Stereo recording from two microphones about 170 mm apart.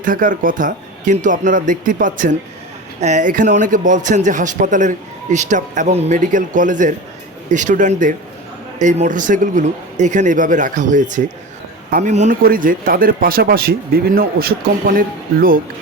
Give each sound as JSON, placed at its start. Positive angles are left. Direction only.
{"t": 0.0, "sound": "a man's voice", "side_deg": -55}
{"t": 12.4, "sound": "speech", "side_deg": -55}